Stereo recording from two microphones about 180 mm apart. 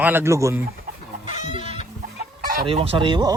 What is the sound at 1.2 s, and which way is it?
Chicken, 40° left (ahead or behind).